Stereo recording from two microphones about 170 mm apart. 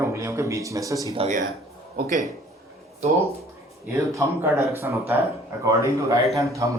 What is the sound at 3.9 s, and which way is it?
A man's voice, 15° right (ahead or behind).